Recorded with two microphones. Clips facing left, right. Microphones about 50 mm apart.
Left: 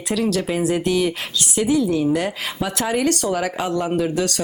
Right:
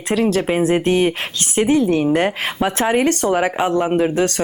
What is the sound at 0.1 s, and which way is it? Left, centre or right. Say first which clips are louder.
Speech: right 4 dB; right.